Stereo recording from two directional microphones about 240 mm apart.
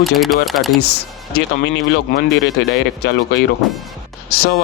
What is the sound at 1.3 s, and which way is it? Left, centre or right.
Speech, left.